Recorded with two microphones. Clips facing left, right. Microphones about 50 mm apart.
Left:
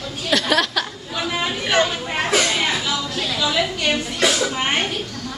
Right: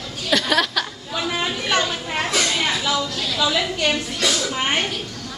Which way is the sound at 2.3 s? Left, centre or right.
Centre.